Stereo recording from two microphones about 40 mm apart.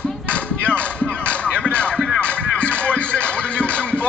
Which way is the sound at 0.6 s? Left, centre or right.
Left.